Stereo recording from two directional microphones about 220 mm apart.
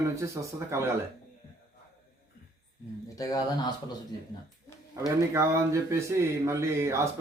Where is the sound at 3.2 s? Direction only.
15° left (ahead or behind).